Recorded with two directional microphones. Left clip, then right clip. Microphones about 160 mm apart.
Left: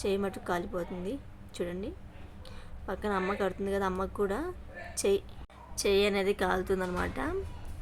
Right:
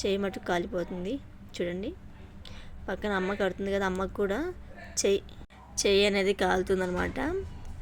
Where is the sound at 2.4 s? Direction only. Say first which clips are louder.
Right 2 dB; 10° right (ahead or behind).